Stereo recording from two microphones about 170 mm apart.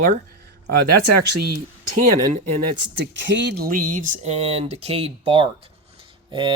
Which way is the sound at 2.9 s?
90° right.